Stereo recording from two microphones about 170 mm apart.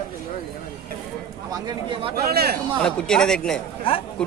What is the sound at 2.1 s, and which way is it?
Speech, 65° right (ahead or behind).